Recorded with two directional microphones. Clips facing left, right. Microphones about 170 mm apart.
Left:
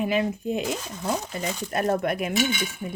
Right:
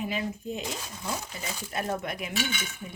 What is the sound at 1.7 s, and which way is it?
Speech, 55° left (ahead or behind).